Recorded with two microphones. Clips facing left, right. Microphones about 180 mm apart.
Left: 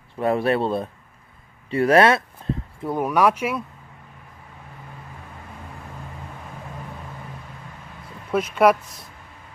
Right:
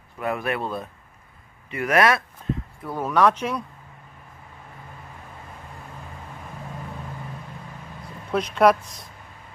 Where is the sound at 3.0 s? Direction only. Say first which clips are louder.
Even; 10° left (ahead or behind).